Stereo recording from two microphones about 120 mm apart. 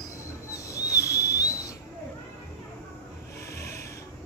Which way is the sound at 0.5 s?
25° left (ahead or behind).